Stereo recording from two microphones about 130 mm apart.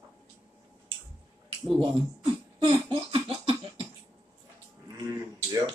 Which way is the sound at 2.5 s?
40° right (ahead or behind).